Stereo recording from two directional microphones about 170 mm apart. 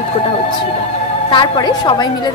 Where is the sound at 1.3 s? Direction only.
25° left (ahead or behind).